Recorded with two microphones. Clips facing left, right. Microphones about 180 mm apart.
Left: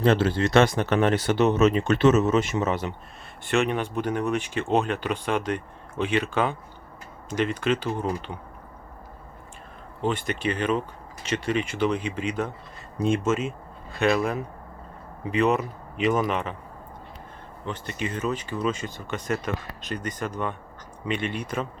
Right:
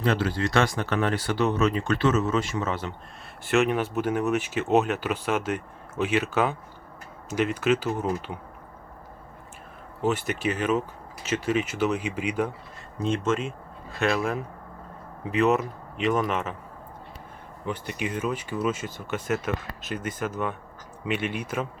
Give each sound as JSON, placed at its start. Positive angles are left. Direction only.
{"t": 0.0, "sound": "speech", "side_deg": 25}
{"t": 3.4, "sound": "speech", "side_deg": -5}
{"t": 10.0, "sound": "speech", "side_deg": -5}
{"t": 13.0, "sound": "a man's voice", "side_deg": 10}
{"t": 17.7, "sound": "a man's voice", "side_deg": -10}